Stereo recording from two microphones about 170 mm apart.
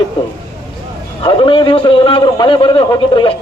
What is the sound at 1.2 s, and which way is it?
A man's voice, 30° left (ahead or behind).